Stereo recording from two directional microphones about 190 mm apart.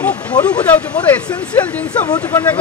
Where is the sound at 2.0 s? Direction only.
15° left (ahead or behind).